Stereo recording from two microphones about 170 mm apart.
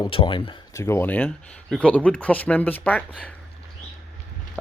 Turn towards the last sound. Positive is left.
turn(degrees=10)  # may be behind; listen again after turning